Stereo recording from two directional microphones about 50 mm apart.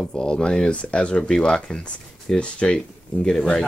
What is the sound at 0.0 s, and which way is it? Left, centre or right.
Speech, centre.